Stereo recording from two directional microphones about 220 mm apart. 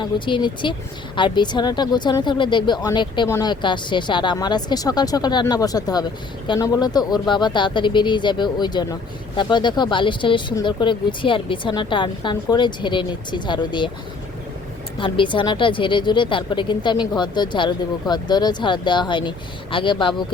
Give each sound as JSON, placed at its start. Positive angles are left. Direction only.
{"t": 0.0, "sound": "speech", "side_deg": 20}
{"t": 14.9, "sound": "speech", "side_deg": 20}